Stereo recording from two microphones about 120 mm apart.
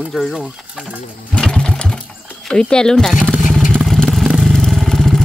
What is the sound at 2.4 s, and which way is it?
Speech, 5° left (ahead or behind).